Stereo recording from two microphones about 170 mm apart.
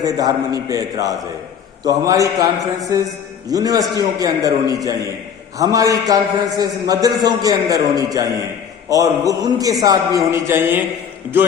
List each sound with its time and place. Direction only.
0.0 s a man's voice: 20° right (ahead or behind)